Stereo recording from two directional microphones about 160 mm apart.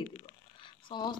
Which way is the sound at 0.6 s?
30° left (ahead or behind).